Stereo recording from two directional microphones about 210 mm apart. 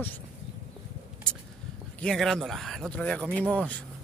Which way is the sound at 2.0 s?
Centre (ahead or behind).